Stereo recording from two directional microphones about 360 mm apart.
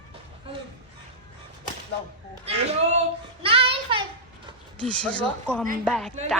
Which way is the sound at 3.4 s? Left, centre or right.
Centre.